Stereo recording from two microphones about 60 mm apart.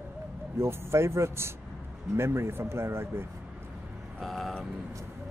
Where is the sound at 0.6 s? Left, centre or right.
Right.